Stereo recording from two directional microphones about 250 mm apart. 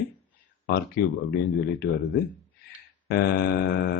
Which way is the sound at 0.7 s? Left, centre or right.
Left.